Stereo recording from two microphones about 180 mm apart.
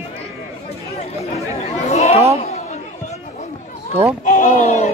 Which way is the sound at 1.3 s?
35° left (ahead or behind).